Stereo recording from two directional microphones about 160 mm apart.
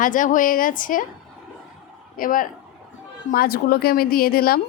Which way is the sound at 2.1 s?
60° left (ahead or behind).